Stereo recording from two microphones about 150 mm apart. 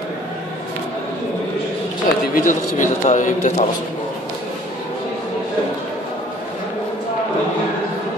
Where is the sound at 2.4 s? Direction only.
60° left (ahead or behind).